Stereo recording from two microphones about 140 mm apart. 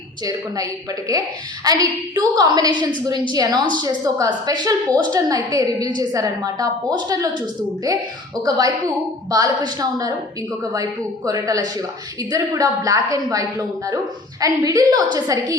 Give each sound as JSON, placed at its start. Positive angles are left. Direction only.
{"t": 0.3, "sound": "a woman's voice", "side_deg": -25}
{"t": 8.4, "sound": "a woman's voice", "side_deg": -30}
{"t": 11.3, "sound": "a woman's voice", "side_deg": -25}